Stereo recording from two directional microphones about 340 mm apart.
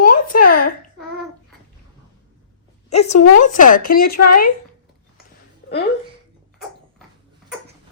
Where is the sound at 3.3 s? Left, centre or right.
Left.